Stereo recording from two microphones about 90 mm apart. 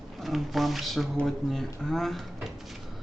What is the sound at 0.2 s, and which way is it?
Speech, centre (ahead or behind).